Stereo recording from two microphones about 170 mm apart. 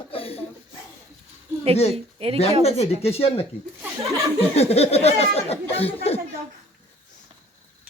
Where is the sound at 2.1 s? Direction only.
35° right (ahead or behind).